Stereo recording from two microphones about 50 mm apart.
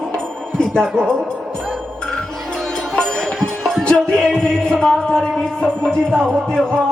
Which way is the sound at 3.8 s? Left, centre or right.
Centre.